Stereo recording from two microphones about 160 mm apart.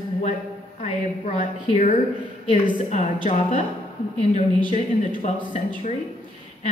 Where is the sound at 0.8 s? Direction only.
40° left (ahead or behind).